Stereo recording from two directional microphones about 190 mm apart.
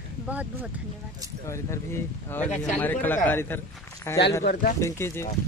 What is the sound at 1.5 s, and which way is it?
Speech, 15° left (ahead or behind).